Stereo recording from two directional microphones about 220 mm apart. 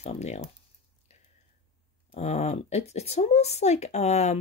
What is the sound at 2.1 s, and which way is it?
Speech, 30° left (ahead or behind).